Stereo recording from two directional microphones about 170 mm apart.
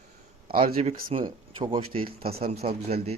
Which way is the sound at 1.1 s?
30° right (ahead or behind).